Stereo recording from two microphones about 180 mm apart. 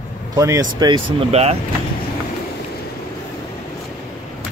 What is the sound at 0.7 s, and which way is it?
Speech, 25° right (ahead or behind).